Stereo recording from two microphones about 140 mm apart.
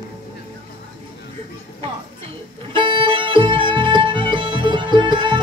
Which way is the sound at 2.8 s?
35° right (ahead or behind).